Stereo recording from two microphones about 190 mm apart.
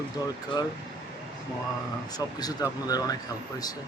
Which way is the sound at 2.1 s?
20° left (ahead or behind).